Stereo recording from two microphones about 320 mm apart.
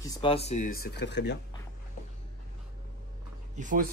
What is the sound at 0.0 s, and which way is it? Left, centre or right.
Speech, centre.